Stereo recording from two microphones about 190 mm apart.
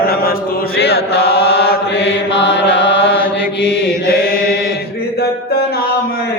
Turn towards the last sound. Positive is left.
turn(degrees=50)  # may be behind; listen again after turning